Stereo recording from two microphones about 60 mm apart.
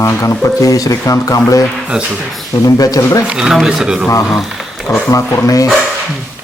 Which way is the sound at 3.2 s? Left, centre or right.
Centre.